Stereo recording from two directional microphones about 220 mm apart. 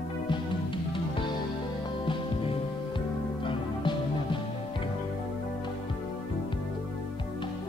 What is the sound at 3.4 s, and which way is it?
Music, 20° left (ahead or behind).